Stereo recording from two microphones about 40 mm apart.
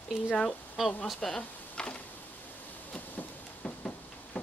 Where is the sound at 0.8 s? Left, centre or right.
Centre.